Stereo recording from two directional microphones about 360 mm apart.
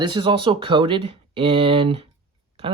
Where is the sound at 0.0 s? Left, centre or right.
Centre.